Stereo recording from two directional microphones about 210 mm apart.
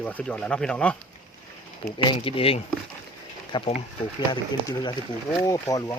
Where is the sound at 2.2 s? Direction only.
25° left (ahead or behind).